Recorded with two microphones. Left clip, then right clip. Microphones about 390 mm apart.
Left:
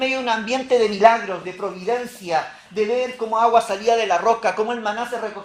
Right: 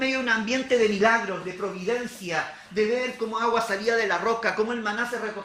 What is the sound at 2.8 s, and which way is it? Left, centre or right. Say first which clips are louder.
Speech: left 4 dB; centre.